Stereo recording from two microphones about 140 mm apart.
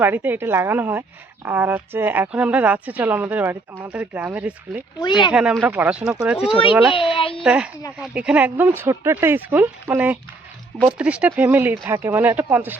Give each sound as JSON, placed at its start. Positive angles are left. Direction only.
{"t": 0.0, "sound": "speech", "side_deg": -15}
{"t": 4.9, "sound": "speech", "side_deg": 35}
{"t": 5.3, "sound": "speech", "side_deg": -5}
{"t": 7.2, "sound": "speech", "side_deg": 40}
{"t": 7.4, "sound": "speech", "side_deg": -5}